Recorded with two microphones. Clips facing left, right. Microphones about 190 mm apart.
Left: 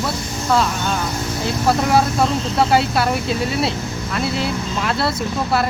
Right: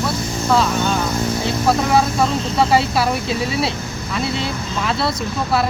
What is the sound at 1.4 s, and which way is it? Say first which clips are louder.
Speech: left 2 dB; centre (ahead or behind).